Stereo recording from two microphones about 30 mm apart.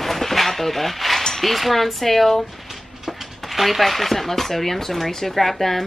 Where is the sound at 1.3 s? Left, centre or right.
Centre.